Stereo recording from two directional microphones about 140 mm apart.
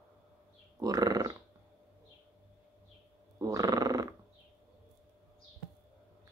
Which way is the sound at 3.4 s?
25° right (ahead or behind).